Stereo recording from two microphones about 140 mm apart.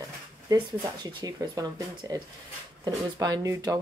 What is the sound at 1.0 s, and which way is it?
Speech, 30° right (ahead or behind).